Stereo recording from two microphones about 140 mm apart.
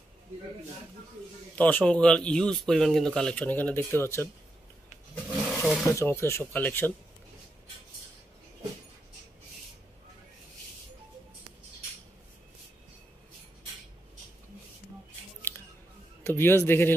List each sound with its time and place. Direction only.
1.5 s speech: 10° left (ahead or behind)
5.3 s roaring cats: 5° right (ahead or behind)
5.9 s speech: 20° left (ahead or behind)
16.3 s speech: 15° left (ahead or behind)